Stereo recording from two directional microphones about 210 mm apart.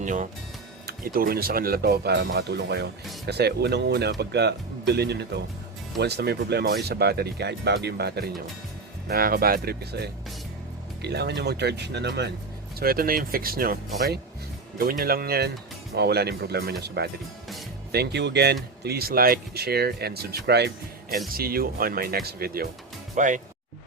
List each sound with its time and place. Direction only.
0.0 s speech: 40° right (ahead or behind)